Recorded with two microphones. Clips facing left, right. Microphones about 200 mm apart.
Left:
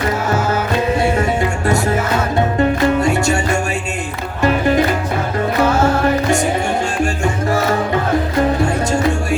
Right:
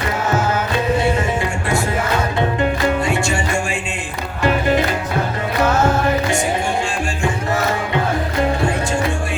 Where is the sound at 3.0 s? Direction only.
40° left (ahead or behind).